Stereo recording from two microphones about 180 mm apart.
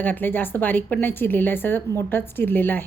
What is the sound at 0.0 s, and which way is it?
A woman's voice, 10° left (ahead or behind).